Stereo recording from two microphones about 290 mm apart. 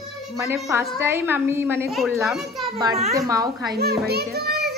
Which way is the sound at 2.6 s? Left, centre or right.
Centre.